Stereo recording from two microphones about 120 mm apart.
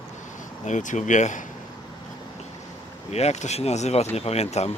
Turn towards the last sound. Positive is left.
turn(degrees=65)  # may be behind; listen again after turning